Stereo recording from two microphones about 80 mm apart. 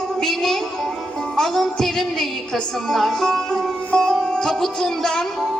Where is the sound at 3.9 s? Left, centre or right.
Centre.